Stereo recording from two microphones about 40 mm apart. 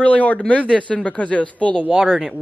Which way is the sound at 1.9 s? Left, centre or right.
Centre.